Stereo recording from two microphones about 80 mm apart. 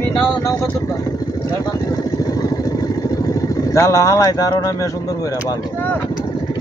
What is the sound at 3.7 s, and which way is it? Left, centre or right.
Speech, left.